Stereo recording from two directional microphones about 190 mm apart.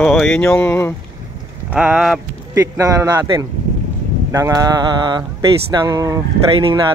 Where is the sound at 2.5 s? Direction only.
20° right (ahead or behind).